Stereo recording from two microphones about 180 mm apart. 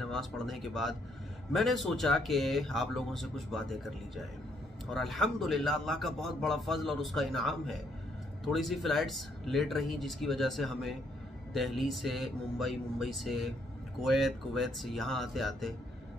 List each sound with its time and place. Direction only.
0.0 s a man's voice: centre (ahead or behind)